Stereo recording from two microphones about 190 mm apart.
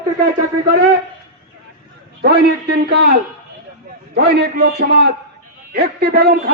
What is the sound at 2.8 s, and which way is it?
A man's voice, 55° right (ahead or behind).